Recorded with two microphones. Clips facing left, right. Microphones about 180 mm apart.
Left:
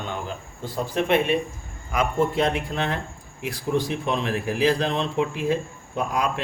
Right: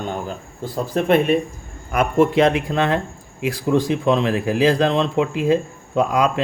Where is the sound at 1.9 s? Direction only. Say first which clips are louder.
Right 6 dB; 65° right (ahead or behind).